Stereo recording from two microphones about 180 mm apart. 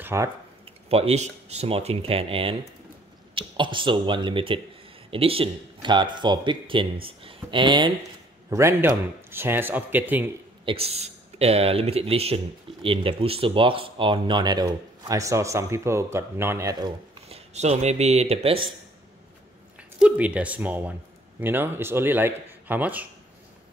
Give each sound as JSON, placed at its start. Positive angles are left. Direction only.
{"t": 0.0, "sound": "speech", "side_deg": -15}
{"t": 0.8, "sound": "speech", "side_deg": -35}
{"t": 8.5, "sound": "speech", "side_deg": -15}
{"t": 10.6, "sound": "speech", "side_deg": -30}
{"t": 17.3, "sound": "speech", "side_deg": -40}
{"t": 20.0, "sound": "speech", "side_deg": -5}